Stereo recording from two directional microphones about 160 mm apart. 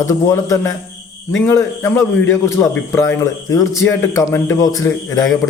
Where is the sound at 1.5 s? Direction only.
10° left (ahead or behind).